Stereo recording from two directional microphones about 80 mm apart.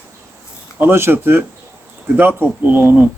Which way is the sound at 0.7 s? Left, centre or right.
Right.